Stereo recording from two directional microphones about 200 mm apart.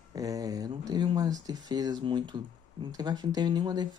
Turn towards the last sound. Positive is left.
turn(degrees=-20)  # may be behind; listen again after turning